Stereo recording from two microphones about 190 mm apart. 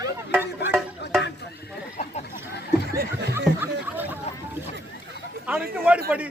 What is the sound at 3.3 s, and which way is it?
Speech, 10° right (ahead or behind).